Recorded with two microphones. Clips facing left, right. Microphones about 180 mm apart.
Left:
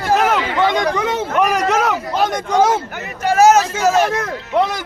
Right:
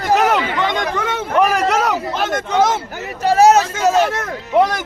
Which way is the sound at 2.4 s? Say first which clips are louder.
Left 1 dB; 10° left (ahead or behind).